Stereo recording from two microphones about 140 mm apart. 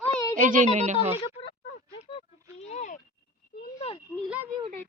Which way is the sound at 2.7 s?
60° left (ahead or behind).